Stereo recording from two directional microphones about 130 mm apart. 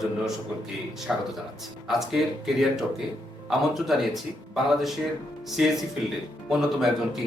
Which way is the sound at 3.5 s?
Centre (ahead or behind).